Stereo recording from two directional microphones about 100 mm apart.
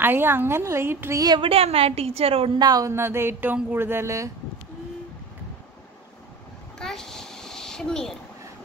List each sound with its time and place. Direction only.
0.0 s a woman's voice: 20° right (ahead or behind)
1.4 s a woman's voice: 75° right (ahead or behind)
2.6 s speech: 40° right (ahead or behind)
2.9 s a woman's voice: 25° right (ahead or behind)
6.8 s a sound: 5° left (ahead or behind)